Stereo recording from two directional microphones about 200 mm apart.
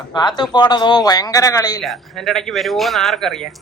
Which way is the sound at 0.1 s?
20° left (ahead or behind).